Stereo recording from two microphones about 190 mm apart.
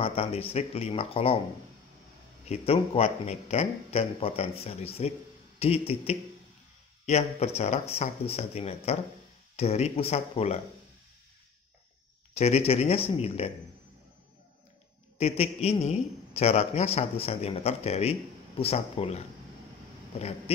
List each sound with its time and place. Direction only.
0.0 s a man's voice: 30° left (ahead or behind)
2.4 s a man's voice: 35° left (ahead or behind)
12.4 s a man's voice: 35° left (ahead or behind)
15.1 s a man's voice: 30° left (ahead or behind)